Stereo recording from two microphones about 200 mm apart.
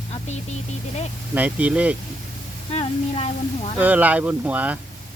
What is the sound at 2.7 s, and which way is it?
Speech, 30° left (ahead or behind).